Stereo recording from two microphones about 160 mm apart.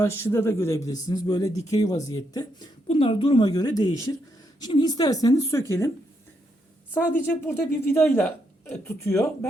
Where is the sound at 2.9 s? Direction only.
35° left (ahead or behind); by 5.9 s 20° left (ahead or behind).